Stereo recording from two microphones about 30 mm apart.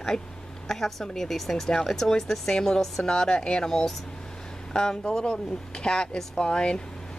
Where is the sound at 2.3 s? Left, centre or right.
Centre.